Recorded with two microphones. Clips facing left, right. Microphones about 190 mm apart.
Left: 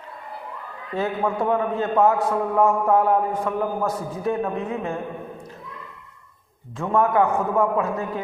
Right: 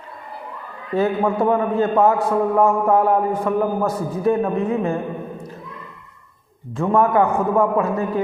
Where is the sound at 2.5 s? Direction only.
5° right (ahead or behind).